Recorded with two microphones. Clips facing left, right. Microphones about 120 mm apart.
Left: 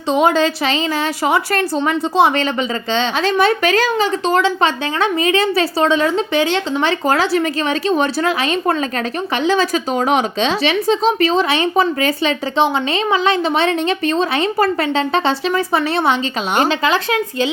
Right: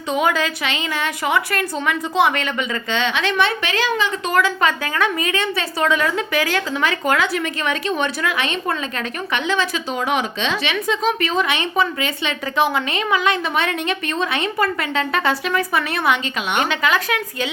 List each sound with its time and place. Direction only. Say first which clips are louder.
0.1 s a woman's voice: left 5 dB; 30° left (ahead or behind)
4.3 s a woman's voice: left 1 dB; 25° left (ahead or behind)